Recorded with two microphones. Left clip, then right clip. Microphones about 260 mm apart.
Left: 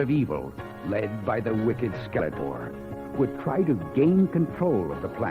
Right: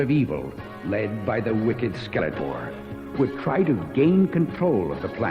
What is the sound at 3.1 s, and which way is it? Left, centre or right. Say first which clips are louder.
Speech: right 3 dB; left.